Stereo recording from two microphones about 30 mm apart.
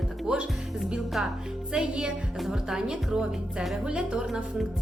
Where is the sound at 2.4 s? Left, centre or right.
Centre.